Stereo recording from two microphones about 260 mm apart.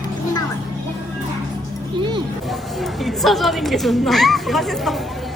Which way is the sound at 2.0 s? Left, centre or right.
Centre.